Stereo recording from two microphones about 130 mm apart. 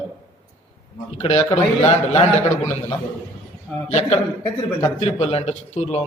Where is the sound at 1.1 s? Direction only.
55° left (ahead or behind).